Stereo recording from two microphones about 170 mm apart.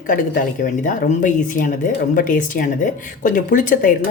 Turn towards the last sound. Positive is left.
turn(degrees=50)  # may be behind; listen again after turning